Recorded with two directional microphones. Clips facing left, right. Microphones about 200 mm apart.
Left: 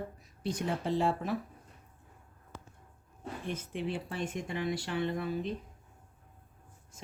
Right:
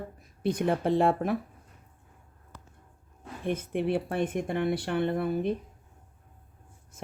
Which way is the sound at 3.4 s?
55° right (ahead or behind).